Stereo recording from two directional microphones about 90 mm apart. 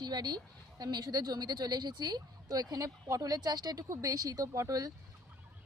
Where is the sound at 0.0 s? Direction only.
50° right (ahead or behind).